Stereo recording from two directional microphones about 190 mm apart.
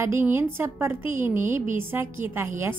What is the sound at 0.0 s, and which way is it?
A woman's voice, 10° right (ahead or behind).